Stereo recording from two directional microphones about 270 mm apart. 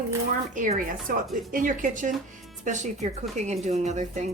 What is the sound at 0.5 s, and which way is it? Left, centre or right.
Speech, right.